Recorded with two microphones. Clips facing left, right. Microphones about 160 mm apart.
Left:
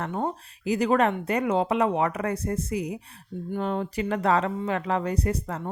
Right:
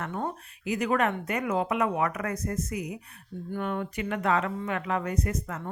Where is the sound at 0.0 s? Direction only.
25° left (ahead or behind).